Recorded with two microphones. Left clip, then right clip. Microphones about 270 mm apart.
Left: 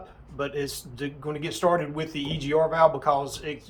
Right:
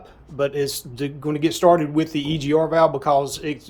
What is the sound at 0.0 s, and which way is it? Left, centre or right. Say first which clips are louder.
Speech: right 9 dB; right.